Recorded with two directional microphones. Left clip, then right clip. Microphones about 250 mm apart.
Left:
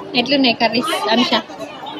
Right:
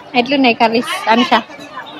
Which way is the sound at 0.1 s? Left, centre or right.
Centre.